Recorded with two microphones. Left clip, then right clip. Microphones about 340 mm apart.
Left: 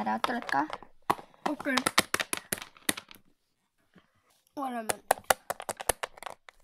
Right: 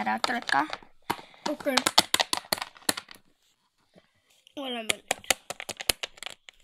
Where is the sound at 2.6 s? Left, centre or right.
Centre.